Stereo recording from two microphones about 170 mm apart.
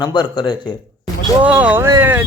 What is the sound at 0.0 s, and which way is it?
Speech, 25° left (ahead or behind).